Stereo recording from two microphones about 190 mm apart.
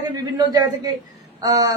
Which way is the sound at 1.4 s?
20° right (ahead or behind).